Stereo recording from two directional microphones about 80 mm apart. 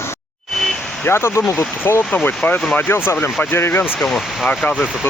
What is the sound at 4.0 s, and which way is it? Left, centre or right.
Speech, centre.